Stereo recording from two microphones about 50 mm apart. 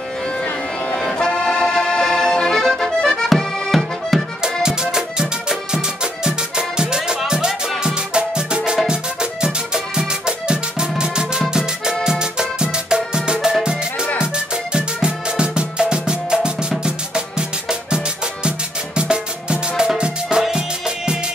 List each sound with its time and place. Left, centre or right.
1.1 s accordion: centre
4.1 s music: centre
4.6 s music: centre